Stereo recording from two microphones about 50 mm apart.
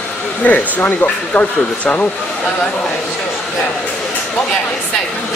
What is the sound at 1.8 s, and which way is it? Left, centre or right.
Speech, left.